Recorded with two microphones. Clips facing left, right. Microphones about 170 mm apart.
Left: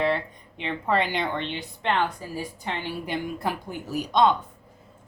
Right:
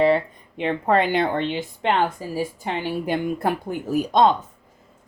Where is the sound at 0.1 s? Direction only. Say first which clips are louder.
Right 7 dB; 50° right (ahead or behind).